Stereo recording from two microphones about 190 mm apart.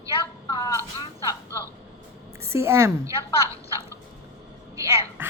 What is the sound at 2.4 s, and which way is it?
A woman's voice, 15° right (ahead or behind).